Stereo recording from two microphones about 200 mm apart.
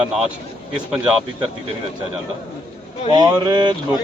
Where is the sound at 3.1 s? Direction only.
20° right (ahead or behind).